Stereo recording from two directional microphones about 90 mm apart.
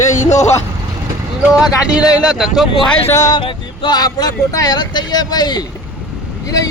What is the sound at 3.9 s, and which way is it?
Speech, 45° left (ahead or behind).